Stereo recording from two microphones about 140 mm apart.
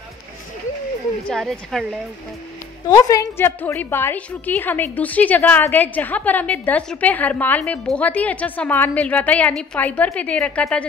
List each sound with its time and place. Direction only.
1.2 s speech: centre (ahead or behind)
2.9 s a woman's voice: 25° left (ahead or behind); by 10.9 s 10° left (ahead or behind)